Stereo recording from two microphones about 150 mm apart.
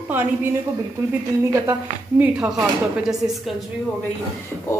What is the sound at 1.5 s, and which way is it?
Speech, 20° right (ahead or behind).